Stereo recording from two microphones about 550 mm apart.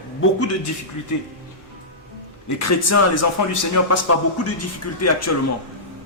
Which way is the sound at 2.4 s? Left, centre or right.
Left.